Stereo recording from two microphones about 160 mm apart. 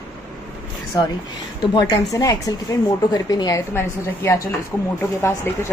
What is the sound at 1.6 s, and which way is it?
A woman's voice, 25° left (ahead or behind).